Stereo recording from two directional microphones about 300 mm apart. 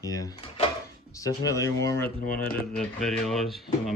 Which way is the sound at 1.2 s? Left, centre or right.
Centre.